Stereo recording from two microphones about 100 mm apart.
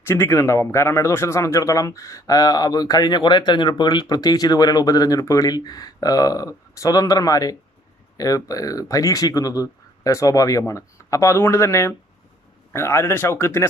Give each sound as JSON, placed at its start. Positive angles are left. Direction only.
{"t": 0.1, "sound": "speech", "side_deg": 25}